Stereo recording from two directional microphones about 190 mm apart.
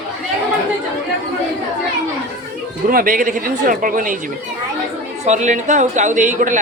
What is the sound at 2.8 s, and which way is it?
Speech, 45° right (ahead or behind).